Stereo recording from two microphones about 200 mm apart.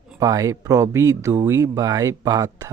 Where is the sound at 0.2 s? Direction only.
15° right (ahead or behind).